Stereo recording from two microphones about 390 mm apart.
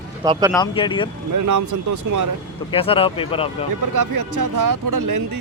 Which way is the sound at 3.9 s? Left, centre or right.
Right.